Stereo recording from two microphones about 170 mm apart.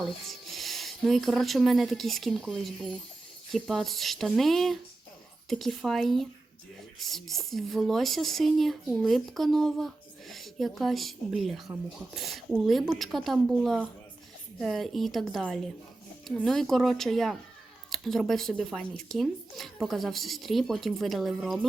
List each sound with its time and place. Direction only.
0.0 s speech: centre (ahead or behind)